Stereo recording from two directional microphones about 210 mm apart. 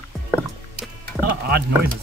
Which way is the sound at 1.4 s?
50° right (ahead or behind).